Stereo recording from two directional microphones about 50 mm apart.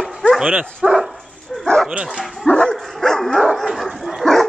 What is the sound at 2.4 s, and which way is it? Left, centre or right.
Dog, left.